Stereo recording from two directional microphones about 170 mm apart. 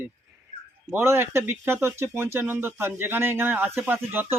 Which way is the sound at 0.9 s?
15° right (ahead or behind).